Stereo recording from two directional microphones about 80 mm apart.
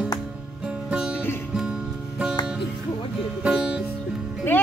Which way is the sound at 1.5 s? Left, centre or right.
Centre.